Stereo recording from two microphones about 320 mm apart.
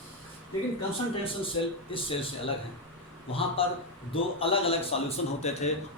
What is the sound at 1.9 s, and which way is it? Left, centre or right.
Speech, centre.